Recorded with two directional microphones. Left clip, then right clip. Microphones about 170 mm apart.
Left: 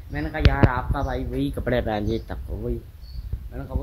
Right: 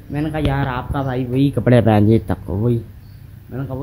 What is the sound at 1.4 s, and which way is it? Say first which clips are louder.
Speech: right 10 dB; 15° right (ahead or behind).